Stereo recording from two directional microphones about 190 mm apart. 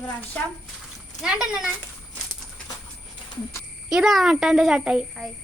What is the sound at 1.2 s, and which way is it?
Speech, 5° right (ahead or behind).